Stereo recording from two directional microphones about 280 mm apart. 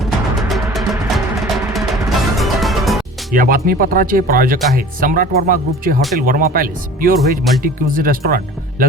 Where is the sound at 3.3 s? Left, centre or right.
Right.